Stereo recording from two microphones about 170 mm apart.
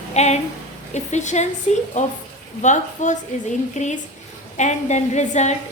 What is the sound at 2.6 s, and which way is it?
Speech, 45° left (ahead or behind).